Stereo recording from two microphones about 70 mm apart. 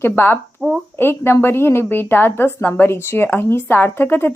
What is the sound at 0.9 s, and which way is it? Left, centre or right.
A woman's voice, left.